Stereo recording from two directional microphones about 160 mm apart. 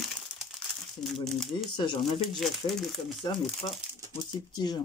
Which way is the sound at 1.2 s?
5° left (ahead or behind).